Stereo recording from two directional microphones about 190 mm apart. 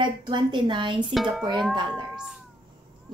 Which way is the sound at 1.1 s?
Centre (ahead or behind).